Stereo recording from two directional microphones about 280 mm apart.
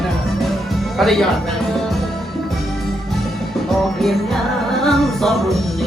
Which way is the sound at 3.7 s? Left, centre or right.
Centre.